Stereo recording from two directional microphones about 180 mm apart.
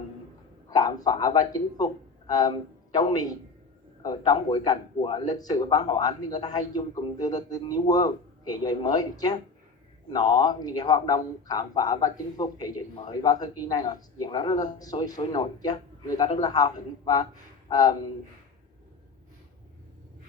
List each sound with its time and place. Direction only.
0.7 s a man's voice: 20° left (ahead or behind)